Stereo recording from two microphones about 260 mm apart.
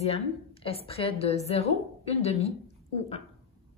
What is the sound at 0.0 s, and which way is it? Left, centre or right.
A woman's voice, left.